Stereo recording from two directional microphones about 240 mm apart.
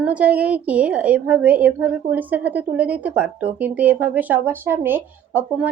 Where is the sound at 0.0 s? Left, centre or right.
Centre.